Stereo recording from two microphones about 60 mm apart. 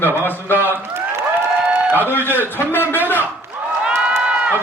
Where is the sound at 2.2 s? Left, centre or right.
Left.